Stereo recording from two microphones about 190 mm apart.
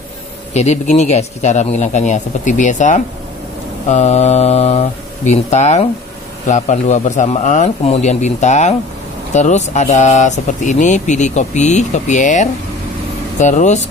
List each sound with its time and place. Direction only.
0.5 s speech: 35° left (ahead or behind)